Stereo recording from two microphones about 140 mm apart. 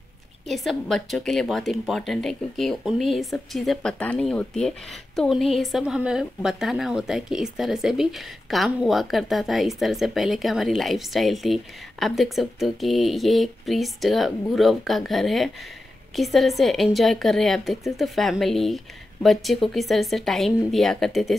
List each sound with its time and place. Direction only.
0.5 s speech: centre (ahead or behind)